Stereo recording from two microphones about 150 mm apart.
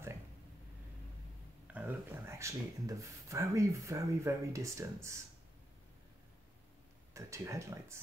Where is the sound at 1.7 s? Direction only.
15° right (ahead or behind).